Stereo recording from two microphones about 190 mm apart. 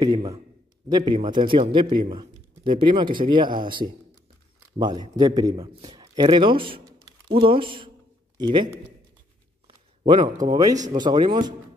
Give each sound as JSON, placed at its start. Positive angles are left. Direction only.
{"t": 0.0, "sound": "a man's voice", "side_deg": -20}
{"t": 10.0, "sound": "speech", "side_deg": -25}